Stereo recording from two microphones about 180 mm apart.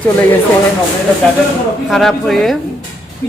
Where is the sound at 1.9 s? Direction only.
Centre (ahead or behind).